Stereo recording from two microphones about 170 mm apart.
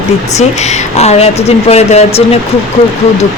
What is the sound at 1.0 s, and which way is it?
Speech, 40° left (ahead or behind).